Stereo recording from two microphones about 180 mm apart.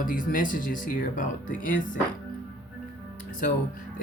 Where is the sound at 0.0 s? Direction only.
50° left (ahead or behind).